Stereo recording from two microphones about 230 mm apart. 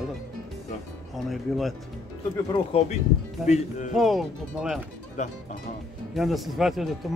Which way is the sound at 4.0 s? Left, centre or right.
Centre.